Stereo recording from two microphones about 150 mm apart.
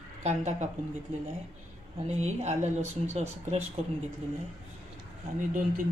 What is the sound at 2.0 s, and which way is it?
Speech, 50° right (ahead or behind).